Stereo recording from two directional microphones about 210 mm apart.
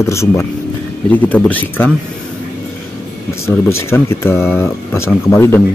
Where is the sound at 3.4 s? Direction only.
10° left (ahead or behind).